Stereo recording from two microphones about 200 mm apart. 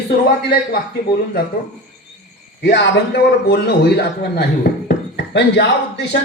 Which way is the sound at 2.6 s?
60° left (ahead or behind).